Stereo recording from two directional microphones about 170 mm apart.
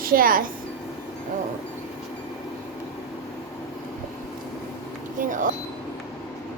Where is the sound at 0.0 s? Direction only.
60° right (ahead or behind).